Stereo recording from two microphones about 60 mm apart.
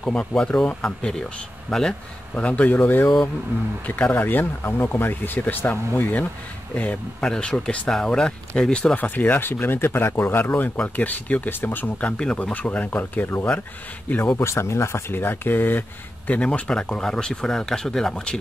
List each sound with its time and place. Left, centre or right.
0.0 s speech: centre
2.3 s speech: left
7.2 s speech: centre
8.9 s speech: left
12.0 s speech: centre
12.5 s speech: left
14.3 s speech: left
16.3 s speech: centre